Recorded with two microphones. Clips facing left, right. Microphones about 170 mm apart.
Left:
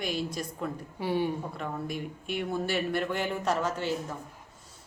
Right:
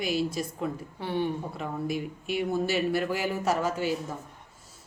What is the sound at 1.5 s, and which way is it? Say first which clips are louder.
Speech: right 3 dB; 5° right (ahead or behind).